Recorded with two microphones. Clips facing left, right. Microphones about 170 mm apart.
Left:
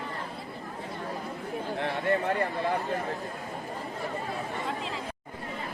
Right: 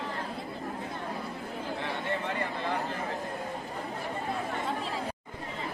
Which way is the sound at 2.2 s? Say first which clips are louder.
Left 5 dB; 50° left (ahead or behind).